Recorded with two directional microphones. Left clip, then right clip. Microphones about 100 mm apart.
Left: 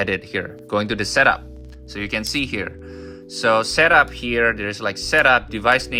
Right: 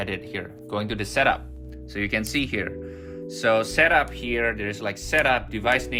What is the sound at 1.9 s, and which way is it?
Speech, 25° left (ahead or behind).